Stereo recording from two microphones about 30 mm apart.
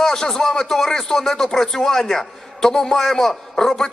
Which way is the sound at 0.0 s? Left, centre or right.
Centre.